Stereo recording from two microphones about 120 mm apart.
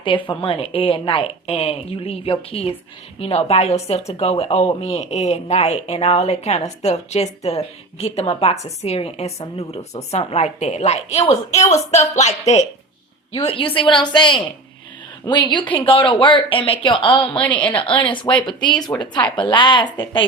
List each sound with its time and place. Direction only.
0.0 s a woman's voice: 45° left (ahead or behind); by 12.6 s 70° left (ahead or behind)
13.3 s a woman's voice: 50° left (ahead or behind)
17.4 s a woman's voice: 10° left (ahead or behind)
17.8 s a woman's voice: 45° left (ahead or behind)